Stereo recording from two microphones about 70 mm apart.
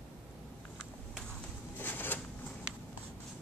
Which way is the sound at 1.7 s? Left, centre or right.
Left.